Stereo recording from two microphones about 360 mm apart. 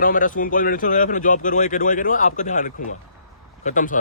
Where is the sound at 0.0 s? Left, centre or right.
Left.